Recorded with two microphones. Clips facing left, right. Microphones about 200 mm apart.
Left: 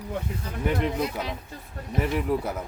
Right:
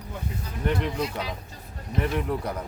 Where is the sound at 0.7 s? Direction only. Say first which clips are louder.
Even; 5° left (ahead or behind).